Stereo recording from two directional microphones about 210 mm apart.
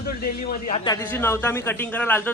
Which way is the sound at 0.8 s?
15° left (ahead or behind).